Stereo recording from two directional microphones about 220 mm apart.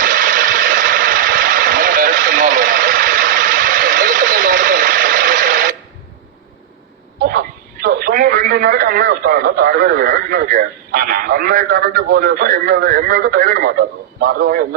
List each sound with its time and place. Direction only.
0.0 s vehicle: 35° right (ahead or behind)
7.2 s radio: 40° right (ahead or behind)